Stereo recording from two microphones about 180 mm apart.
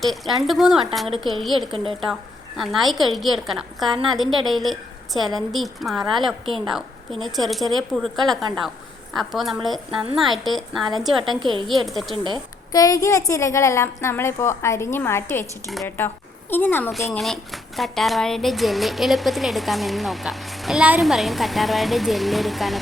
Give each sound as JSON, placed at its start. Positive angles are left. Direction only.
{"t": 0.0, "sound": "speech", "side_deg": 0}
{"t": 1.7, "sound": "speech", "side_deg": -30}
{"t": 2.6, "sound": "speech", "side_deg": 0}
{"t": 11.3, "sound": "speech", "side_deg": -25}
{"t": 11.9, "sound": "speech", "side_deg": 0}
{"t": 12.1, "sound": "speech", "side_deg": -25}
{"t": 12.7, "sound": "a woman's voice", "side_deg": 20}